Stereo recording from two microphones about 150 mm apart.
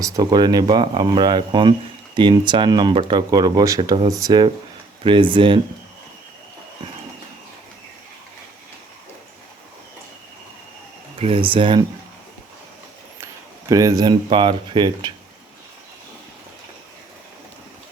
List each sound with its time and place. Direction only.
0.0 s speech: 25° right (ahead or behind)
11.2 s speech: 40° right (ahead or behind)
13.1 s speech: 20° right (ahead or behind)